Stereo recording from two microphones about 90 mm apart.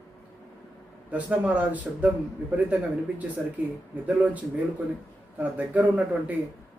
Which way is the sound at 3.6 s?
15° right (ahead or behind).